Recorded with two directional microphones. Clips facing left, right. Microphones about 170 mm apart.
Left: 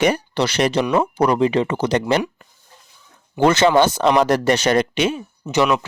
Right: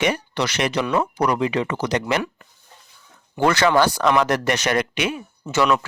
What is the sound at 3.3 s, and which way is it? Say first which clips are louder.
Speech: left 3 dB; 20° left (ahead or behind).